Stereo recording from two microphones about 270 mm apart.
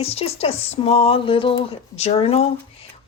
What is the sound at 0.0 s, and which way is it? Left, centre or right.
Speech, left.